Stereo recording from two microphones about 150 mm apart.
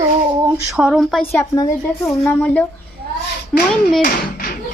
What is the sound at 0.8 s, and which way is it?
Speech, 5° right (ahead or behind).